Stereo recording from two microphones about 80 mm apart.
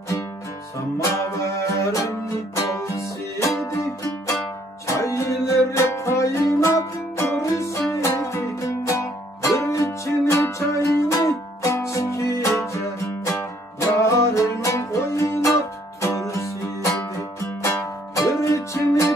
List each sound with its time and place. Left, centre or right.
0.9 s music: left
18.1 s music: left